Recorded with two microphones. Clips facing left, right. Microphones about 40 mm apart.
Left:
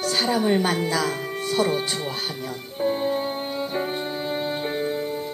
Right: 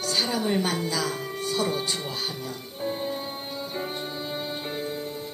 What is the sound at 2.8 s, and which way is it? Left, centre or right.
Music, left.